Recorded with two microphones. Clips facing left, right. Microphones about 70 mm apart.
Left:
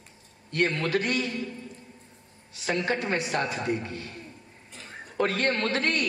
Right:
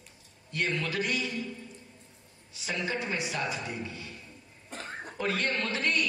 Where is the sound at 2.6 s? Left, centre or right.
Left.